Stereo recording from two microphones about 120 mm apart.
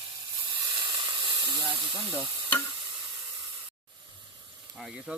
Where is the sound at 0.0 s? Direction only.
40° right (ahead or behind).